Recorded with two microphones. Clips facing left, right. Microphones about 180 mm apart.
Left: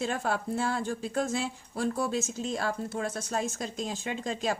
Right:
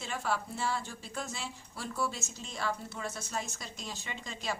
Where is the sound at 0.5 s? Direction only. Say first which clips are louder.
Left 6 dB; 50° left (ahead or behind).